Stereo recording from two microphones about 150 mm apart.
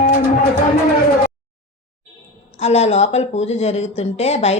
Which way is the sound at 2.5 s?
45° left (ahead or behind).